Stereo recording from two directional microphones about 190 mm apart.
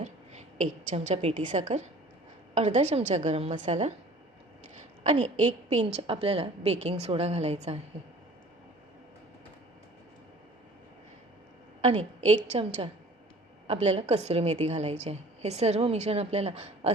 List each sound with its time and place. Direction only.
0.0 s a sound: 35° right (ahead or behind)
1.5 s a woman's voice: 40° right (ahead or behind)
5.0 s a woman's voice: 40° right (ahead or behind)
11.8 s a woman's voice: 35° right (ahead or behind)